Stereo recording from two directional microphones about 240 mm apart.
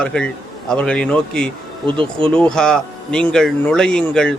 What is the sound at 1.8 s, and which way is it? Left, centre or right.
Speech, right.